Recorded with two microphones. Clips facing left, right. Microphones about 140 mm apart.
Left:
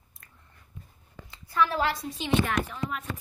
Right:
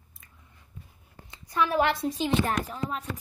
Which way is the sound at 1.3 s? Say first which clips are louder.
Even; 20° right (ahead or behind).